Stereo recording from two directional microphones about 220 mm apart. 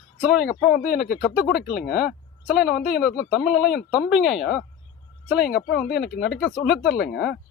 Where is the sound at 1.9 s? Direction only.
45° left (ahead or behind).